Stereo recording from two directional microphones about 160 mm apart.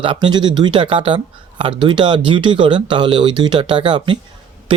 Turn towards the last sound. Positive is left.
turn(degrees=-30)  # may be behind; listen again after turning